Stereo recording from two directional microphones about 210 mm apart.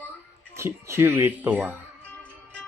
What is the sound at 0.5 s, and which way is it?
Speech, 10° right (ahead or behind).